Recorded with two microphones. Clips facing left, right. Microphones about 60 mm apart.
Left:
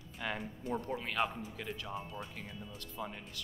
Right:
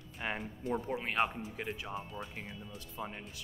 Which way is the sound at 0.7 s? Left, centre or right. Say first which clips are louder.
Right 2 dB; centre.